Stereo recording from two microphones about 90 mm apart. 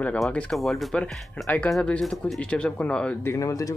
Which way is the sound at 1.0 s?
15° left (ahead or behind).